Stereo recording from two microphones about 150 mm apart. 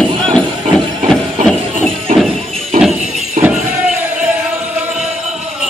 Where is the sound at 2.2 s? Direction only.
Centre (ahead or behind).